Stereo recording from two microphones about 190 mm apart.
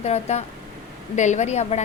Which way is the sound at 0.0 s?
35° left (ahead or behind).